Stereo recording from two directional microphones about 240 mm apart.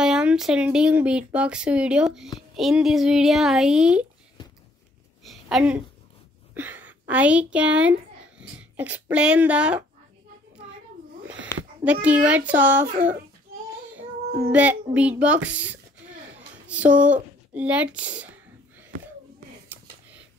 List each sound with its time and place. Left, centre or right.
0.0 s speech: centre
5.2 s a sound: centre
6.5 s a woman's voice: centre
11.8 s speech: centre
12.9 s a child's voice: right
13.9 s a child's voice: centre
16.3 s a sound: centre